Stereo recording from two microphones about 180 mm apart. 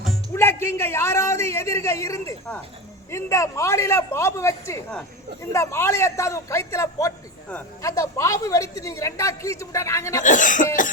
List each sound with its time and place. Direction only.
0.3 s a man's voice: 15° left (ahead or behind)
10.2 s cough: 45° left (ahead or behind)